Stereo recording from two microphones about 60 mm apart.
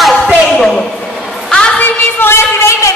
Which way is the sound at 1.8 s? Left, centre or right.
Left.